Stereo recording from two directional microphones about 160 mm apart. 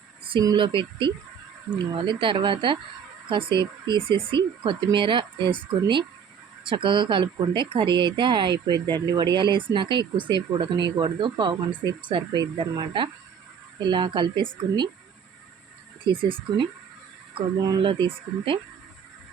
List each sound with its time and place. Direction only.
0.3 s a woman's voice: 30° right (ahead or behind)
16.0 s speech: 30° right (ahead or behind)